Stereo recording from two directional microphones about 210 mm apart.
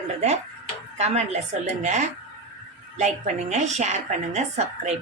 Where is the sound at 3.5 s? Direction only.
35° right (ahead or behind).